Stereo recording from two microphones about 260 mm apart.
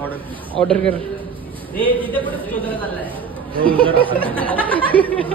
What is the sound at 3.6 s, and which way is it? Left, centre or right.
Speech, centre.